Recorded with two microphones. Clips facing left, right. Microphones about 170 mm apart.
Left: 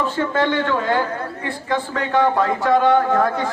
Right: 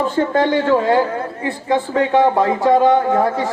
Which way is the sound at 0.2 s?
40° right (ahead or behind).